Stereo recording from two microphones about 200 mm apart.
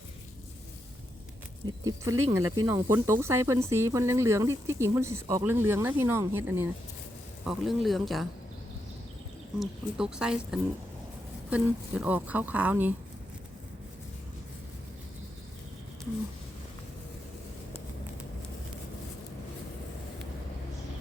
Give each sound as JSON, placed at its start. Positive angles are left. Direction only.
{"t": 1.6, "sound": "speech", "side_deg": -20}
{"t": 9.6, "sound": "speech", "side_deg": -5}